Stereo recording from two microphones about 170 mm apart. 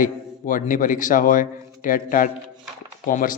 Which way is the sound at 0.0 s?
50° left (ahead or behind).